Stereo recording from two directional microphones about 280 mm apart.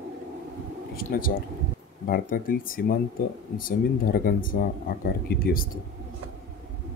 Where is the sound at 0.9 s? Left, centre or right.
Left.